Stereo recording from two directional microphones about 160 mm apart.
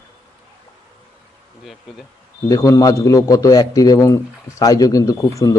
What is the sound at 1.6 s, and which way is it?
Speech, centre (ahead or behind).